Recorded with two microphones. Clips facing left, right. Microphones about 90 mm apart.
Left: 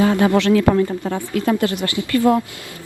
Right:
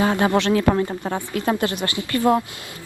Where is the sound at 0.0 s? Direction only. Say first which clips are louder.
Left 3 dB; 25° right (ahead or behind).